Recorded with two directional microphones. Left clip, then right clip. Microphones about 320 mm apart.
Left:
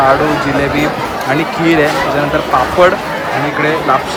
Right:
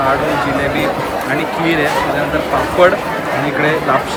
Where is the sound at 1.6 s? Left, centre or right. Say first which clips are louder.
Left 4 dB; centre.